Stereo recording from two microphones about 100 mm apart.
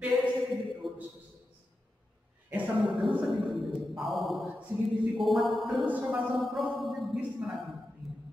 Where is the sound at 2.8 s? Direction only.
Centre (ahead or behind).